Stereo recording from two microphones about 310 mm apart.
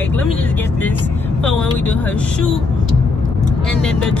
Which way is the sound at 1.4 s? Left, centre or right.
Centre.